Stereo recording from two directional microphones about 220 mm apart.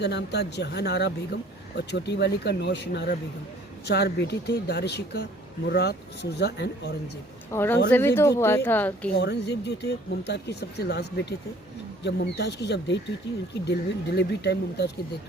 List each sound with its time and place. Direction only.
0.0 s speech: 50° left (ahead or behind)
7.5 s speech: 10° left (ahead or behind)
9.1 s speech: 50° left (ahead or behind)